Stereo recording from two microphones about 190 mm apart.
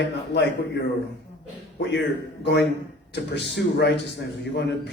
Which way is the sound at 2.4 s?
70° left (ahead or behind).